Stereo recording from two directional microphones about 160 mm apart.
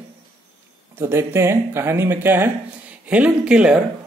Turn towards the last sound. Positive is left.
turn(degrees=-5)  # may be behind; listen again after turning